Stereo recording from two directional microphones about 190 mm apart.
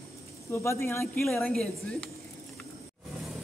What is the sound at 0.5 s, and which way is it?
A woman's voice, 15° left (ahead or behind).